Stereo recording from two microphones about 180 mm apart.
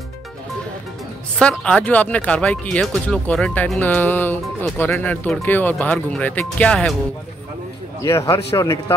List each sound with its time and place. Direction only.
1.4 s speech: 5° left (ahead or behind)
8.0 s speech: 15° left (ahead or behind)